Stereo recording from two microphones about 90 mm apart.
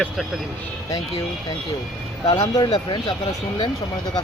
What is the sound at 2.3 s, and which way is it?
Speech, 50° left (ahead or behind).